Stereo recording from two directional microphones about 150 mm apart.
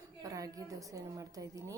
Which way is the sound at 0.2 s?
25° right (ahead or behind).